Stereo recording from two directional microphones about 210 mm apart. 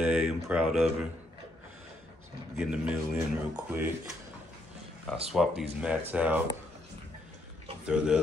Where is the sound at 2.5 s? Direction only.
5° right (ahead or behind).